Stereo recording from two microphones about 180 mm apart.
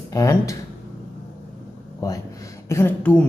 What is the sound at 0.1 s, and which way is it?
Speech, 20° left (ahead or behind).